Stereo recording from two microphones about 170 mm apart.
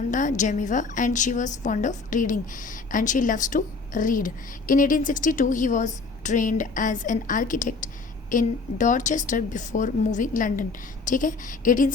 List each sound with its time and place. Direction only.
0.1 s a woman's voice: 50° left (ahead or behind)